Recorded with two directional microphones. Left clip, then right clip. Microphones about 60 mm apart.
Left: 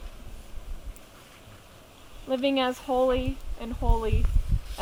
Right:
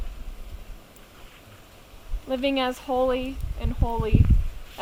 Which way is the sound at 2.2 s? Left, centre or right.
Centre.